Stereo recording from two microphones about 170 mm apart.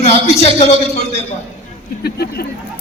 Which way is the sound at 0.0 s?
40° left (ahead or behind).